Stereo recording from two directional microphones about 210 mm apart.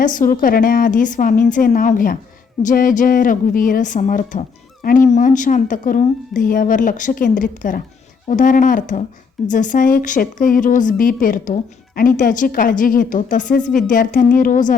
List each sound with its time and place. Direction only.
0.0 s a woman's voice: 40° left (ahead or behind)